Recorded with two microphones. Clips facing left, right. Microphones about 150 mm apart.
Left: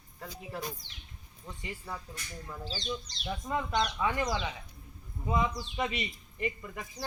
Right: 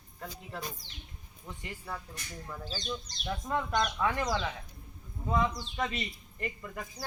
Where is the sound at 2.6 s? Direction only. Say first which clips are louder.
Left 2 dB; 45° right (ahead or behind).